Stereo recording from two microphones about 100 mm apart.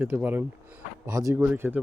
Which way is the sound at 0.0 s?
20° right (ahead or behind).